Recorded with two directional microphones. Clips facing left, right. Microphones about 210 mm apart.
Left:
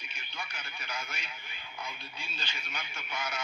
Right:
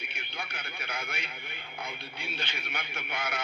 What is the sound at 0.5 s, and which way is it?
Radio, 55° right (ahead or behind).